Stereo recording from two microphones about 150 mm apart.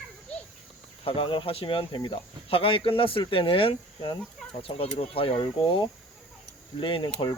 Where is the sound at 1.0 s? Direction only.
35° left (ahead or behind).